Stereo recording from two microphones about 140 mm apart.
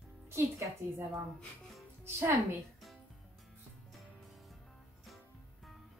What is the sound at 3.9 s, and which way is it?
Music, centre (ahead or behind).